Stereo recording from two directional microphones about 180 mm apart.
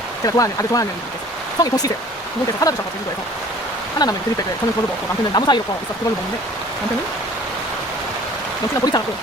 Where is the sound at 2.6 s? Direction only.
20° left (ahead or behind).